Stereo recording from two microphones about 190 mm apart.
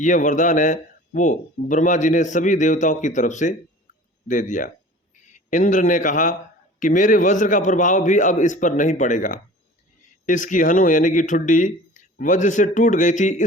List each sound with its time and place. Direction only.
0.0 s a man's voice: 40° left (ahead or behind)